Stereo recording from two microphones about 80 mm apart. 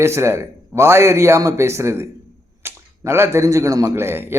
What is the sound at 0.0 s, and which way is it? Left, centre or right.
A man's voice, right.